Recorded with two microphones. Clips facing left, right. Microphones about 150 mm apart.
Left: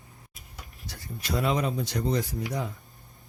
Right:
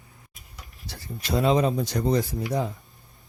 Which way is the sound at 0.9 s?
25° right (ahead or behind).